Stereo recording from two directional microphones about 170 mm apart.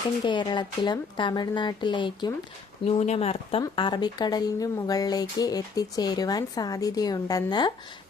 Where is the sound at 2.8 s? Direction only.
40° left (ahead or behind).